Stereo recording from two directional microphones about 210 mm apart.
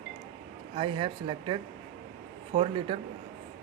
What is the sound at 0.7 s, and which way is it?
Speech, 25° right (ahead or behind).